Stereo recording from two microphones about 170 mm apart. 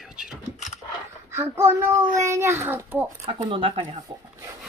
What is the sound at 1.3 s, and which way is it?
A child's voice, 15° right (ahead or behind).